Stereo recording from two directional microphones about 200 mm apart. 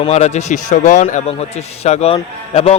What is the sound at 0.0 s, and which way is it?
A man's voice, 35° left (ahead or behind).